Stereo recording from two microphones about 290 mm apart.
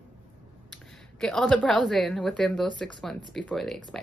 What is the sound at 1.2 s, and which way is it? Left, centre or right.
Speech, centre.